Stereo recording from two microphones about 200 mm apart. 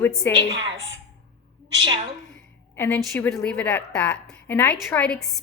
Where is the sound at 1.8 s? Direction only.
25° right (ahead or behind).